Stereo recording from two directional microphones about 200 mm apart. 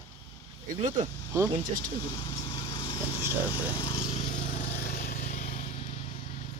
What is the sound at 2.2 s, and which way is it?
Lawn mower, 25° left (ahead or behind).